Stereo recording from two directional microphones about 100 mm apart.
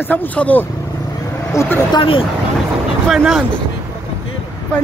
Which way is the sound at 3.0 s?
5° right (ahead or behind).